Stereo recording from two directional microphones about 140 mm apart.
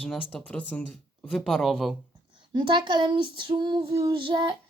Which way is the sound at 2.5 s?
35° right (ahead or behind).